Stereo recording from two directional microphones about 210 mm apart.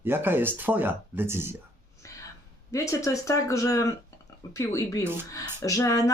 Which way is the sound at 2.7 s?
15° left (ahead or behind).